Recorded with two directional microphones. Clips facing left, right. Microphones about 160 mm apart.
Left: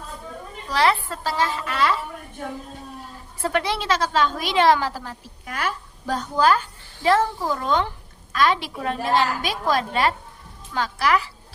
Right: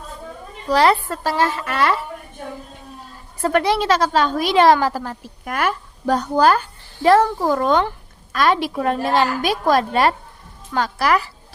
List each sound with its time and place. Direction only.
0.7 s a woman's voice: 45° right (ahead or behind)
3.4 s a woman's voice: 50° right (ahead or behind)